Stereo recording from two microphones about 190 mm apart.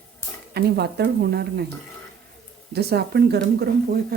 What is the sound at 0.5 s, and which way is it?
Speech, 55° right (ahead or behind).